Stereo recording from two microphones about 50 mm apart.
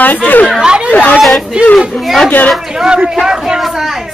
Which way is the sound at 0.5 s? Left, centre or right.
Centre.